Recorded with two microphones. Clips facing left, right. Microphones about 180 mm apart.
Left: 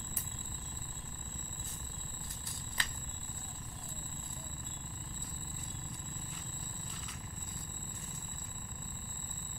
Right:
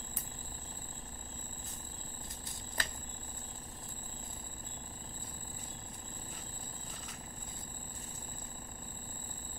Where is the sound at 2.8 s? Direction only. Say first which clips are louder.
Right 3 dB; 45° right (ahead or behind).